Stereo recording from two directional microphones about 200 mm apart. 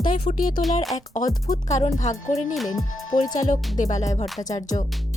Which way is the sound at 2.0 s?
35° left (ahead or behind).